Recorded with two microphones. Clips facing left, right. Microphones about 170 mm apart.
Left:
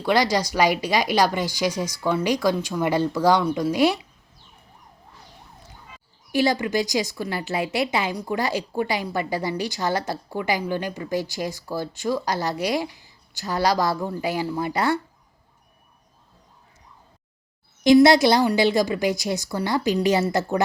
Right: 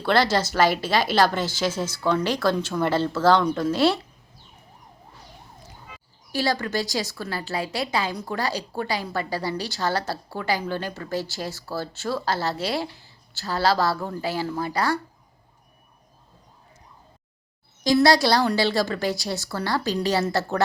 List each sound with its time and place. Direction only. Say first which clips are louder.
0.0 s a woman's voice: even; 15° left (ahead or behind)
6.3 s a woman's voice: left 4 dB; 20° left (ahead or behind)
17.8 s a woman's voice: left 4 dB; 20° left (ahead or behind)